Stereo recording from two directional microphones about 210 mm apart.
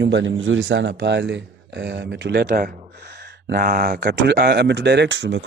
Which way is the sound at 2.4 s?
40° right (ahead or behind).